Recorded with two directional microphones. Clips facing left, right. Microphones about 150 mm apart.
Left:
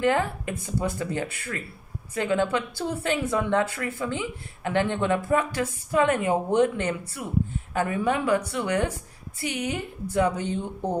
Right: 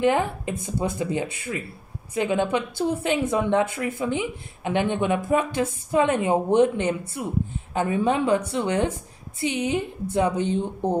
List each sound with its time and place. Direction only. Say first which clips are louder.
0.0 s a woman's voice: right 2 dB; 20° right (ahead or behind)